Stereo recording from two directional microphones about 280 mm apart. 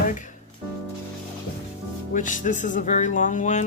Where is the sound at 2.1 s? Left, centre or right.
Left.